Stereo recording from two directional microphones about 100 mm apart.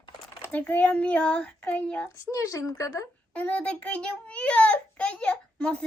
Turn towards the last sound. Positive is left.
turn(degrees=10)  # may be behind; listen again after turning